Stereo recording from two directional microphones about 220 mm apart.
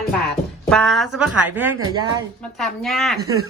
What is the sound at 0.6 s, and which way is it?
Speech, centre (ahead or behind).